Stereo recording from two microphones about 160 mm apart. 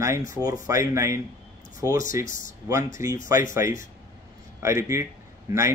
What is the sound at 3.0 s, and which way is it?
A man's voice, 15° right (ahead or behind).